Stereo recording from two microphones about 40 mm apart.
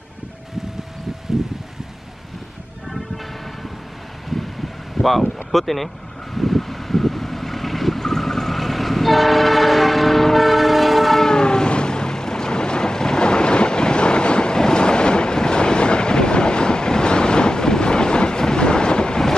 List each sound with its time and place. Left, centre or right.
5.5 s speech: centre
6.3 s boat: centre
11.2 s vehicle: centre